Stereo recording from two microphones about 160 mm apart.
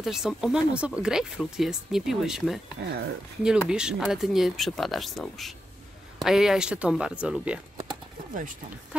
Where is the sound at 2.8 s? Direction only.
90° right.